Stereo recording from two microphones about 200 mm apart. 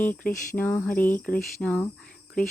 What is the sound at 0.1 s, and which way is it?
Speech, 10° left (ahead or behind).